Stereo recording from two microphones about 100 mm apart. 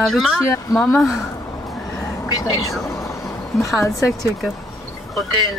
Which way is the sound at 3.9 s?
35° left (ahead or behind).